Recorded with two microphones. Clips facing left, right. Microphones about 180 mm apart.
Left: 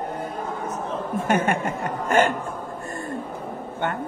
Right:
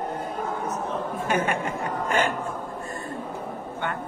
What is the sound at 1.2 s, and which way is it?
Speech, 50° left (ahead or behind).